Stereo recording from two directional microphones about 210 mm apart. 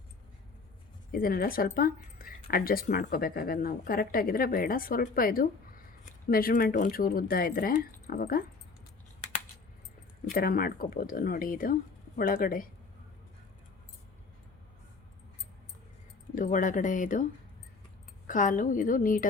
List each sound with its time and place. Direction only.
1.1 s speech: 45° left (ahead or behind)
10.3 s speech: 45° left (ahead or behind)
16.3 s speech: 40° left (ahead or behind)
18.3 s speech: 40° left (ahead or behind)